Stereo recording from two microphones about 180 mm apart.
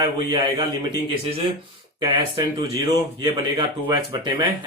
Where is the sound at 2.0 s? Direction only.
25° right (ahead or behind).